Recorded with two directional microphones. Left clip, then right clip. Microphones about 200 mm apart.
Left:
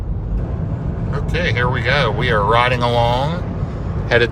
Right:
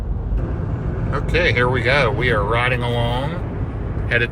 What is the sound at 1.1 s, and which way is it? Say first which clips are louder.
Speech: right 3 dB; 5° left (ahead or behind).